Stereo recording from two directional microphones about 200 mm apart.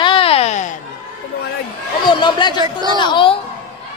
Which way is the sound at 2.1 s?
20° left (ahead or behind).